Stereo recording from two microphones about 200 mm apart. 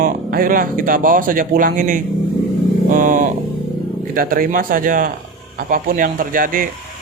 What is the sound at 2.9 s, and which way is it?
Vehicle, 40° right (ahead or behind).